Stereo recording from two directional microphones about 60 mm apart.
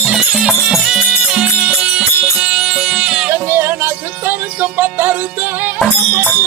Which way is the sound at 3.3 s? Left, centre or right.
Right.